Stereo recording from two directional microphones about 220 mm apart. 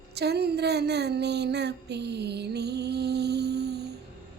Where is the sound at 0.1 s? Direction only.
50° right (ahead or behind).